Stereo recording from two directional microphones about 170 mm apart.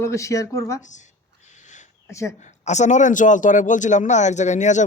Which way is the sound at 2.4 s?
45° left (ahead or behind).